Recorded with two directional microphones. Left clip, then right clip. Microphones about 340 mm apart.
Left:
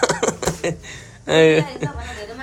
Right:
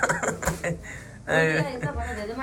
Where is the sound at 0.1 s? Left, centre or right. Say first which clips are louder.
Left 5 dB; centre.